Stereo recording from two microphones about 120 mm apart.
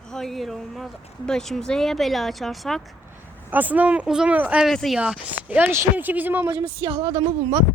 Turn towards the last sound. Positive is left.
turn(degrees=-50)  # may be behind; listen again after turning